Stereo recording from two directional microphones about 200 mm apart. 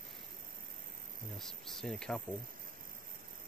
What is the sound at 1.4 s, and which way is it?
Speech, centre (ahead or behind).